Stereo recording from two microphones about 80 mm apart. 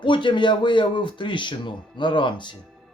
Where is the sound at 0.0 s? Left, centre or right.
Left.